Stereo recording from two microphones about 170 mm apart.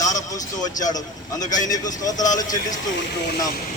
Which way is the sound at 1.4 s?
45° left (ahead or behind).